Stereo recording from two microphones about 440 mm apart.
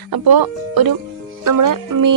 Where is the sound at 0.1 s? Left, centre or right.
Right.